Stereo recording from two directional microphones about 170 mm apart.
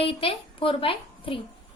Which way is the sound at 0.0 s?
35° left (ahead or behind).